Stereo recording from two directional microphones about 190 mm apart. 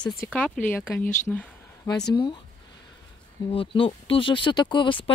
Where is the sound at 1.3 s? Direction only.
Centre (ahead or behind).